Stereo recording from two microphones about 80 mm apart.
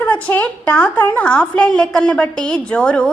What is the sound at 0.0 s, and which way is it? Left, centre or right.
A woman's voice, left.